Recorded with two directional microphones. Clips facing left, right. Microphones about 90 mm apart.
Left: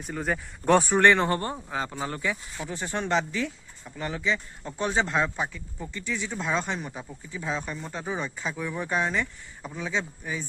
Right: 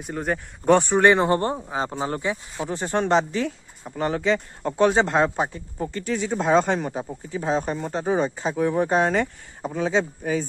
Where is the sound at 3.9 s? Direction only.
50° right (ahead or behind).